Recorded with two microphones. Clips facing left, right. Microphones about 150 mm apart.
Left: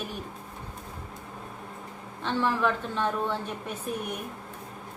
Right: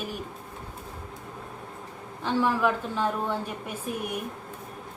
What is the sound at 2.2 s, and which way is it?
Speech, 5° right (ahead or behind).